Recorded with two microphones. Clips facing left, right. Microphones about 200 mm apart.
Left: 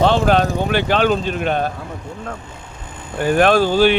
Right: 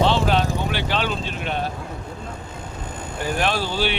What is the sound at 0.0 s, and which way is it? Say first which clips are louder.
Vehicle: left 5 dB; 50° left (ahead or behind).